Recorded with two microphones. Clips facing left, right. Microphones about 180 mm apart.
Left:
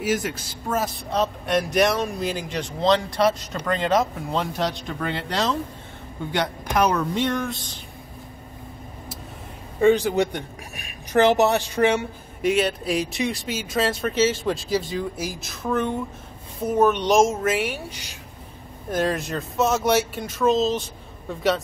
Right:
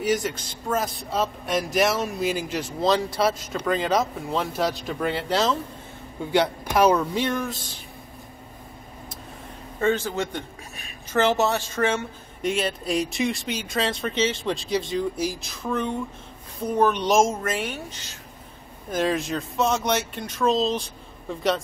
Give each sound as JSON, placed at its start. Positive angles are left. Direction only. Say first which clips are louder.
{"t": 0.0, "sound": "a man's voice", "louder": "even", "side_deg": 5}
{"t": 9.8, "sound": "a woman's voice", "louder": "left 6 dB", "side_deg": 15}
{"t": 12.4, "sound": "a man's voice", "louder": "left 4 dB", "side_deg": 0}
{"t": 18.9, "sound": "a man's voice", "louder": "even", "side_deg": 0}